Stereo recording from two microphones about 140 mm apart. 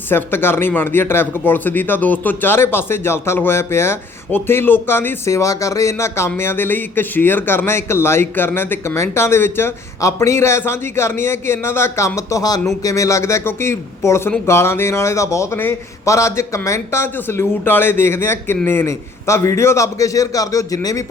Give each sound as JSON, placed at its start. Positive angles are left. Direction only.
{"t": 0.1, "sound": "a man's voice", "side_deg": 15}